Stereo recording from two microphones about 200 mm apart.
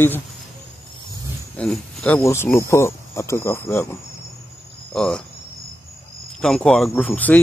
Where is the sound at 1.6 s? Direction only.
5° left (ahead or behind).